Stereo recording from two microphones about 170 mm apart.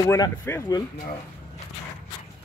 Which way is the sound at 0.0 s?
20° left (ahead or behind).